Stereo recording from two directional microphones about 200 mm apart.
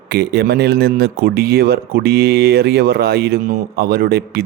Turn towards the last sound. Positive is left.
turn(degrees=-50)  # may be behind; listen again after turning